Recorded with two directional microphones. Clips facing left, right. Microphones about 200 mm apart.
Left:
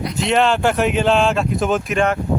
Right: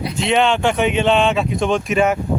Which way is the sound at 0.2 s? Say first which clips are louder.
Even; centre (ahead or behind).